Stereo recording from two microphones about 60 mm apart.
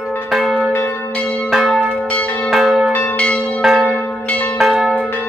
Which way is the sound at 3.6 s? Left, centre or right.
Centre.